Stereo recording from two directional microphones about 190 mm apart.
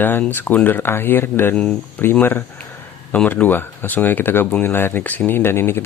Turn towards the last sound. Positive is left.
turn(degrees=10)  # may be behind; listen again after turning